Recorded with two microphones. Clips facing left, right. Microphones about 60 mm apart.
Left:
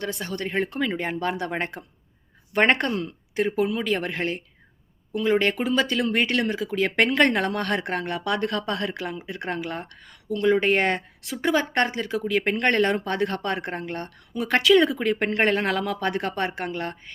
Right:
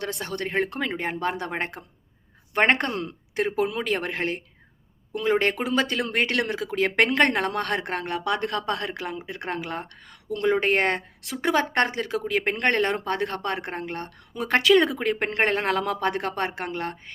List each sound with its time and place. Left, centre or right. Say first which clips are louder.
0.0 s speech: even; right
2.9 s a woman's voice: left 1 dB; right
8.2 s speech: even; right
8.4 s a woman's voice: left 1 dB; right
12.2 s speech: left 2 dB; right